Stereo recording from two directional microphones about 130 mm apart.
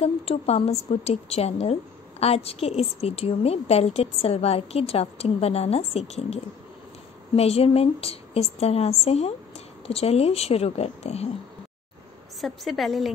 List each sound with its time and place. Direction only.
0.0 s a woman's voice: 50° left (ahead or behind)
12.4 s a woman's voice: centre (ahead or behind)